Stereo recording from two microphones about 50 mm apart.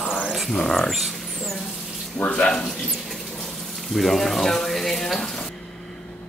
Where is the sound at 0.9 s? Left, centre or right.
Centre.